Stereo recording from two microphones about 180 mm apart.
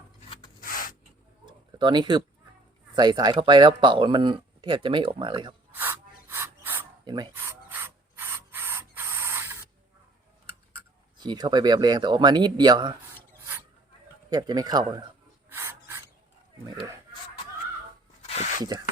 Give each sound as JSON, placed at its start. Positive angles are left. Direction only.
{"t": 0.6, "sound": "a sound", "side_deg": 50}
{"t": 1.5, "sound": "bird", "side_deg": -25}
{"t": 2.9, "sound": "speech", "side_deg": -25}
{"t": 5.7, "sound": "filing", "side_deg": -10}
{"t": 7.0, "sound": "speech", "side_deg": -25}
{"t": 7.3, "sound": "rub", "side_deg": -10}
{"t": 11.2, "sound": "speech", "side_deg": -25}
{"t": 14.3, "sound": "speech", "side_deg": -20}
{"t": 15.4, "sound": "filing", "side_deg": -15}
{"t": 18.2, "sound": "a sound", "side_deg": 40}